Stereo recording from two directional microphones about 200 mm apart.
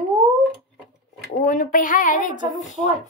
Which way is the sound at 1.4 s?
45° left (ahead or behind).